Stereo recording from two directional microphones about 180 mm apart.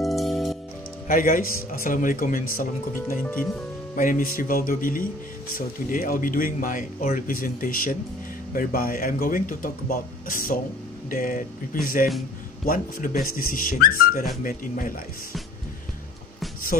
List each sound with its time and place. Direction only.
0.0 s music: centre (ahead or behind)
1.0 s speech: 50° left (ahead or behind)